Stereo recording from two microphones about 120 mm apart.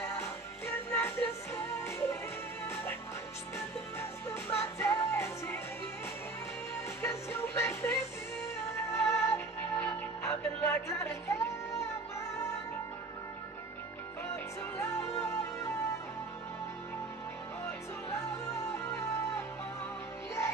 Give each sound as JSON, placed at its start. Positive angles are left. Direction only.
{"t": 0.2, "sound": "music", "side_deg": 20}
{"t": 7.0, "sound": "music", "side_deg": 25}
{"t": 14.3, "sound": "music", "side_deg": 20}
{"t": 17.6, "sound": "music", "side_deg": 25}